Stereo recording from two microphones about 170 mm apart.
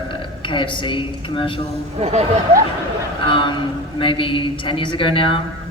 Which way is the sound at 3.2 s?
30° left (ahead or behind).